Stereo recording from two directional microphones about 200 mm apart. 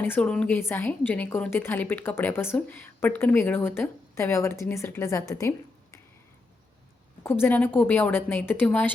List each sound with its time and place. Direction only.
0.0 s a woman's voice: 5° left (ahead or behind)
7.3 s a woman's voice: 10° left (ahead or behind)